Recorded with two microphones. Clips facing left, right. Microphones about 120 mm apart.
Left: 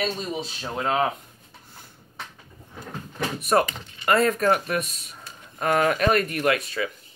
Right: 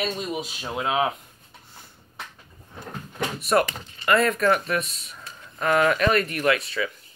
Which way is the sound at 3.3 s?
40° left (ahead or behind).